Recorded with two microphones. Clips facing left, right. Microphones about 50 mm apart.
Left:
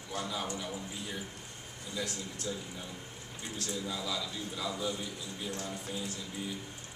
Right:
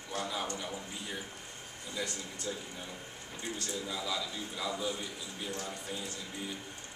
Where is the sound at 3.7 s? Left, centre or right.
Centre.